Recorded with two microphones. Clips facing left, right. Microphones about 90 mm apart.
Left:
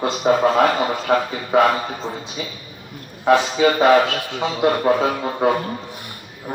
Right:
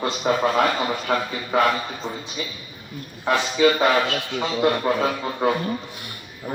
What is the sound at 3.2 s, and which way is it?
Speech, 5° left (ahead or behind).